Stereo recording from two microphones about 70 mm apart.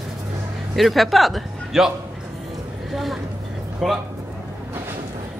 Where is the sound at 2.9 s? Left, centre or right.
Centre.